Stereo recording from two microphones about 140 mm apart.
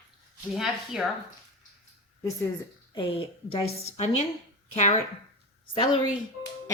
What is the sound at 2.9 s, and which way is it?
A woman's voice, 40° left (ahead or behind).